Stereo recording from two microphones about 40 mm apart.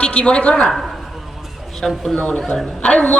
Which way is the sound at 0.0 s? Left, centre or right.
Left.